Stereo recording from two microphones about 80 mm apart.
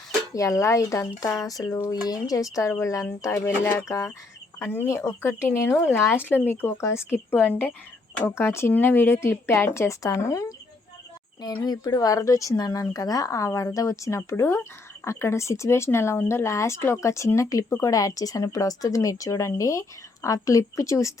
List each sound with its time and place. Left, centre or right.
0.3 s speech: left
4.6 s speech: left
8.2 s speech: left
11.4 s speech: left